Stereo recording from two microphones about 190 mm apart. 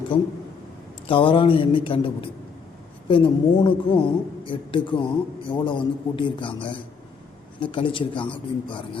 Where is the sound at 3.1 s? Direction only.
25° left (ahead or behind).